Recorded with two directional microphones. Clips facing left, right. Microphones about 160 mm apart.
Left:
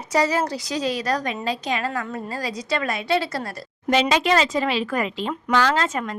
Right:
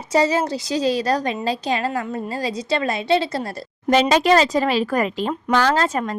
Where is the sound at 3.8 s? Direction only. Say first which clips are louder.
Right 4 dB; 40° right (ahead or behind).